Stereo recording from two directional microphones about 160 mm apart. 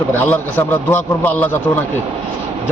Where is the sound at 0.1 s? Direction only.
15° left (ahead or behind).